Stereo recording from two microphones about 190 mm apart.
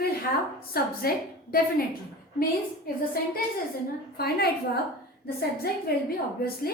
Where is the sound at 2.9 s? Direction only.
50° left (ahead or behind).